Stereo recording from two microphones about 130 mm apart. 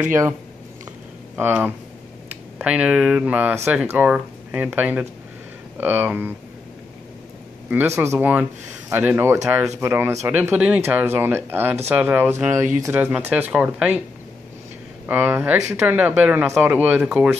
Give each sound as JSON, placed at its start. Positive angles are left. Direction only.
{"t": 1.3, "sound": "speech", "side_deg": -10}
{"t": 7.7, "sound": "speech", "side_deg": -20}
{"t": 15.0, "sound": "speech", "side_deg": -15}